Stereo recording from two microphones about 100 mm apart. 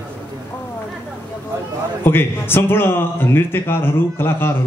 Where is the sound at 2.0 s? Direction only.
20° left (ahead or behind).